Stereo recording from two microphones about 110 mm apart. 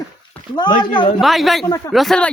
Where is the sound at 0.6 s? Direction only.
45° left (ahead or behind).